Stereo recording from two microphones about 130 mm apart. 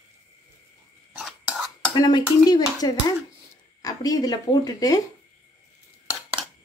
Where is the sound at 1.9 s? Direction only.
35° left (ahead or behind).